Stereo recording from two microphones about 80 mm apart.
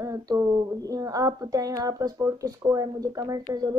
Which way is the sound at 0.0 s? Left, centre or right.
Right.